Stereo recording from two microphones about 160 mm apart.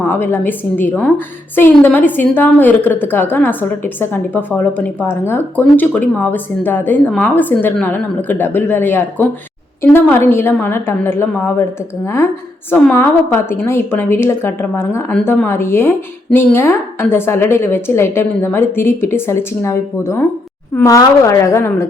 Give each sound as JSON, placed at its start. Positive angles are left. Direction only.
{"t": 0.0, "sound": "a woman's voice", "side_deg": 15}